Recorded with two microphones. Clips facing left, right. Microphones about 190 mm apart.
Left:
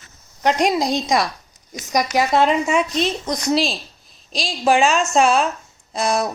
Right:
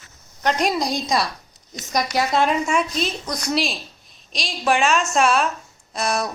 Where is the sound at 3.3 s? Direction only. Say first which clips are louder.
Left 4 dB; 25° left (ahead or behind).